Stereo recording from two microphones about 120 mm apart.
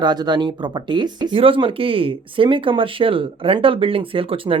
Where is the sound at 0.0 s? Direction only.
35° right (ahead or behind).